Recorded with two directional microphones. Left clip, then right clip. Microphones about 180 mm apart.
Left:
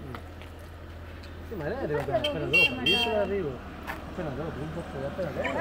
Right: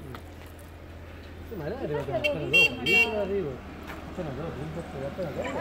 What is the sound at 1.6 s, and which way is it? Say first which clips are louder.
Speech: left 2 dB; 10° left (ahead or behind).